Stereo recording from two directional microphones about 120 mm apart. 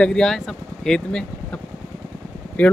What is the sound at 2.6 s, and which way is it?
Speech, 15° left (ahead or behind).